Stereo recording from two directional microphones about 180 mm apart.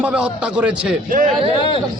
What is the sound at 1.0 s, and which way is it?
Speech, 50° right (ahead or behind).